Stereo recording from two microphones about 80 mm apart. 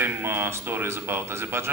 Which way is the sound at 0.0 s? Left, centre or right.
Right.